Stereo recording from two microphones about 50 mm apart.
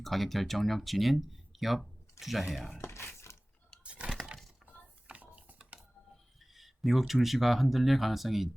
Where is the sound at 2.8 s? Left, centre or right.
Left.